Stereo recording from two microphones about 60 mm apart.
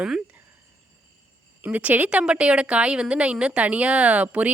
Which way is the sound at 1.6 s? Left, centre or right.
Right.